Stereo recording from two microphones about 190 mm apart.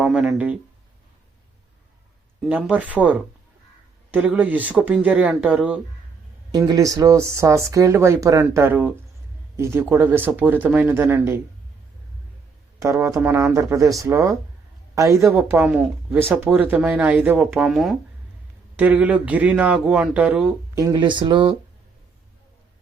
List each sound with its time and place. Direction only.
0.0 s speech: 5° right (ahead or behind)
2.4 s speech: 5° right (ahead or behind)
6.5 s speech: 20° right (ahead or behind)
12.8 s speech: 15° right (ahead or behind)
20.7 s speech: 20° right (ahead or behind)